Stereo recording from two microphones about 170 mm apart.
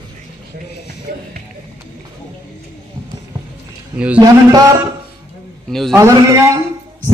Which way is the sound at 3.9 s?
5° right (ahead or behind).